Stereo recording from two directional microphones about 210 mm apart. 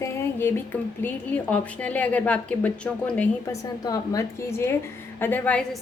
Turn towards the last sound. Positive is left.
turn(degrees=5)  # may be behind; listen again after turning